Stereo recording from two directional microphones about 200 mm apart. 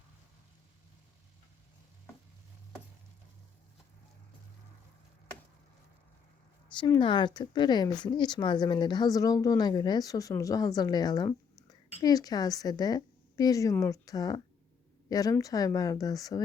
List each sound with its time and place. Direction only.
6.7 s a woman's voice: 20° left (ahead or behind)